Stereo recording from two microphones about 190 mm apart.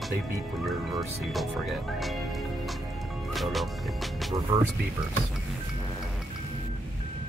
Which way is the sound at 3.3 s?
Centre (ahead or behind).